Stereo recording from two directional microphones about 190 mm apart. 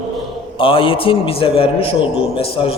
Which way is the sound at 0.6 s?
30° left (ahead or behind).